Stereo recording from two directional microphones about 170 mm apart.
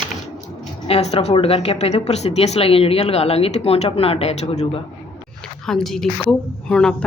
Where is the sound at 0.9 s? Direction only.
35° left (ahead or behind).